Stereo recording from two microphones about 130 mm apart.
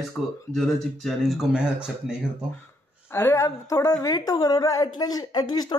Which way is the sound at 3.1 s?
25° left (ahead or behind).